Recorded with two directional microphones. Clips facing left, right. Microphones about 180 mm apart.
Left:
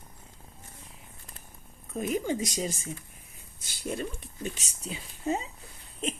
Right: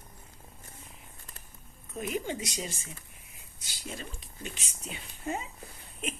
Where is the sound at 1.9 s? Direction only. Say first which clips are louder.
Left 4 dB; 40° left (ahead or behind).